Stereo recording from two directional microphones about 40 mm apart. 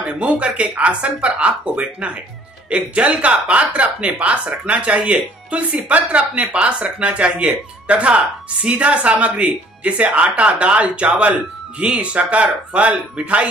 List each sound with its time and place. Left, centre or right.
0.0 s speech: right